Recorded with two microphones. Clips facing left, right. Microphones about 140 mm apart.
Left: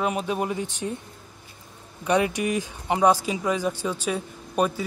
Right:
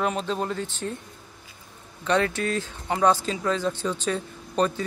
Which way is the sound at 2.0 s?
15° left (ahead or behind).